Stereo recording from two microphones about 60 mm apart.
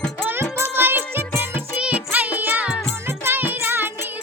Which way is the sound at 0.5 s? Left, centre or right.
Right.